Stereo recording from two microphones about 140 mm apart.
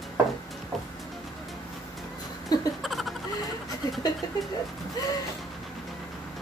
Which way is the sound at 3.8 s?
25° left (ahead or behind).